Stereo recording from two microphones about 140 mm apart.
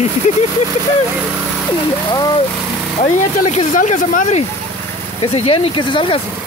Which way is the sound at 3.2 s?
60° left (ahead or behind).